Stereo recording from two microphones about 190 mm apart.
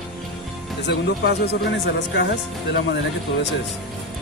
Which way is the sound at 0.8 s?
60° left (ahead or behind).